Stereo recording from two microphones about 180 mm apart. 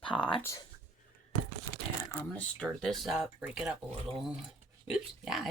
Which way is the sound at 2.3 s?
5° left (ahead or behind).